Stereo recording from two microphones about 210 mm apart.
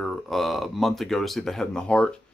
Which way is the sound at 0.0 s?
Centre (ahead or behind).